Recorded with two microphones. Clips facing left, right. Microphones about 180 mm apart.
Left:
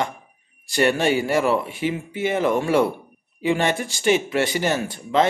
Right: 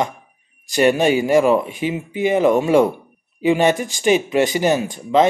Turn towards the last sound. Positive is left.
turn(degrees=-15)  # may be behind; listen again after turning